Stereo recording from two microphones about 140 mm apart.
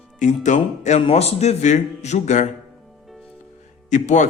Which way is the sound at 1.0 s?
45° left (ahead or behind).